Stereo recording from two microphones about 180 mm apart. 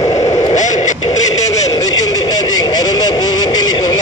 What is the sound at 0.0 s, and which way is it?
Radio, 25° left (ahead or behind).